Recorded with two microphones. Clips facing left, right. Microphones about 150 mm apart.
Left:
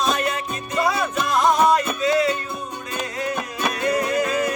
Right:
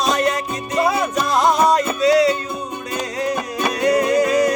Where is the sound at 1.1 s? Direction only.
35° right (ahead or behind).